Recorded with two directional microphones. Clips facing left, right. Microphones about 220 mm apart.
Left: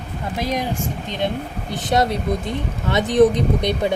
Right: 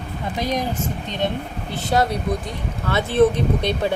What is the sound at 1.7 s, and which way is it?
Speech, 20° left (ahead or behind).